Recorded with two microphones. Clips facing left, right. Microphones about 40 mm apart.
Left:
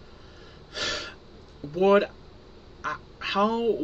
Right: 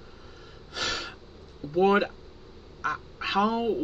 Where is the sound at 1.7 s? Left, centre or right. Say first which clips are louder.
Left 2 dB; centre.